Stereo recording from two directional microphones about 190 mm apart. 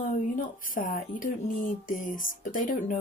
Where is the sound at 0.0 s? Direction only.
45° left (ahead or behind).